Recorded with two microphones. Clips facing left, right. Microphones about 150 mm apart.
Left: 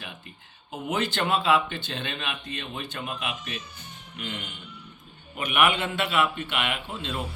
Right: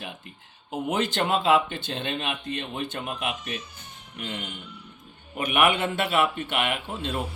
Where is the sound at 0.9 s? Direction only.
40° right (ahead or behind).